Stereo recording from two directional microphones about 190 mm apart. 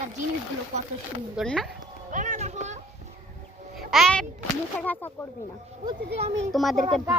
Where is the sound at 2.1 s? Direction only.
40° right (ahead or behind).